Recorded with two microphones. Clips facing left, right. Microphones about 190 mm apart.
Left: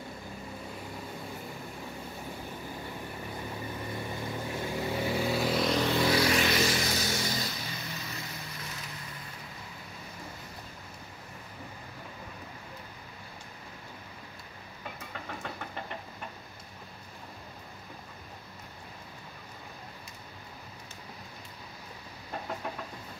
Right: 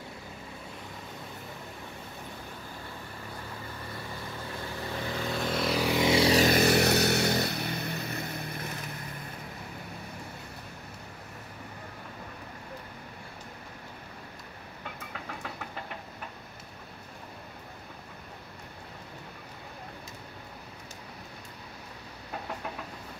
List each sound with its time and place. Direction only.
4.5 s vehicle: 15° left (ahead or behind); by 6.1 s 15° right (ahead or behind)
6.1 s vehicle: 35° right (ahead or behind)
6.5 s vehicle: 60° right (ahead or behind)